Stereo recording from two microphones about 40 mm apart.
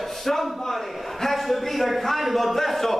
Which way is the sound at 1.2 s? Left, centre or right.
Centre.